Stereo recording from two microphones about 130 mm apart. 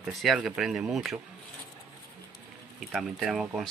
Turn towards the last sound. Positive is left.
turn(degrees=0)  # may be behind; listen again after turning